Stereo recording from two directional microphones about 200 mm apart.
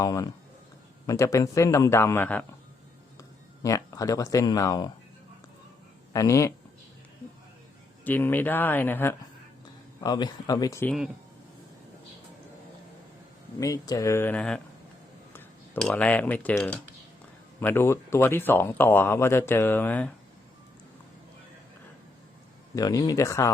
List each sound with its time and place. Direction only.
0.0 s speech: 15° left (ahead or behind)
6.1 s speech: 15° left (ahead or behind)
8.0 s speech: 10° left (ahead or behind)
13.6 s speech: 15° left (ahead or behind)
22.7 s speech: 15° left (ahead or behind)